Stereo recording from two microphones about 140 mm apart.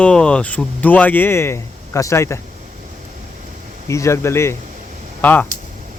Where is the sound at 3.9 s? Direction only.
20° left (ahead or behind).